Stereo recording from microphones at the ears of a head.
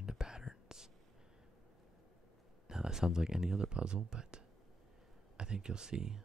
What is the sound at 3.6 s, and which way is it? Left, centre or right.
Speech, right.